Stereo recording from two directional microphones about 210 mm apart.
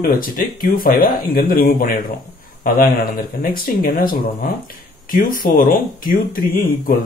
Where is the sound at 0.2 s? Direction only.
40° left (ahead or behind).